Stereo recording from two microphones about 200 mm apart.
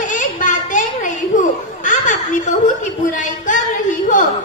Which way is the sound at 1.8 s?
40° left (ahead or behind).